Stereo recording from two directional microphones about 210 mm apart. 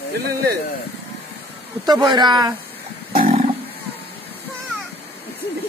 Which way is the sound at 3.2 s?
35° right (ahead or behind).